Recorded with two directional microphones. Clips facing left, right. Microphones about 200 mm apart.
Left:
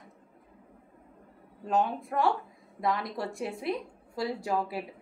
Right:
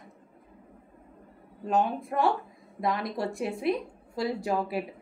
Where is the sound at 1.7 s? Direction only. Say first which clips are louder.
Right 2 dB; 20° right (ahead or behind).